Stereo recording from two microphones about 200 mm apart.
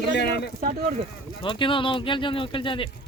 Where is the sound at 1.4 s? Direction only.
25° left (ahead or behind).